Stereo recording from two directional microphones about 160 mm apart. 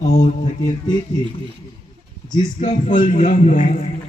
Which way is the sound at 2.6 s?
50° left (ahead or behind).